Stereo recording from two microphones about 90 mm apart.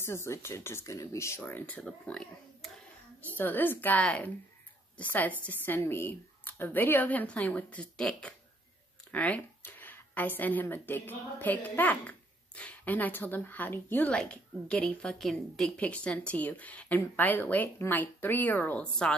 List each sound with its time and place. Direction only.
0.0 s speech: 30° left (ahead or behind)
2.0 s speech: 10° left (ahead or behind)
3.3 s speech: 20° left (ahead or behind)